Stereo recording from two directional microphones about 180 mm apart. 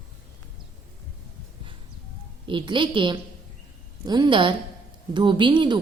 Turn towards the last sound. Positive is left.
turn(degrees=-25)  # may be behind; listen again after turning